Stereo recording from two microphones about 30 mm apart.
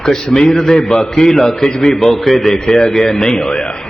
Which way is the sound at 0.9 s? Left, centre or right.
Centre.